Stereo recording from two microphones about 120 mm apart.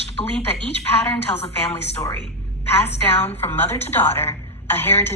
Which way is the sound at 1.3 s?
60° left (ahead or behind).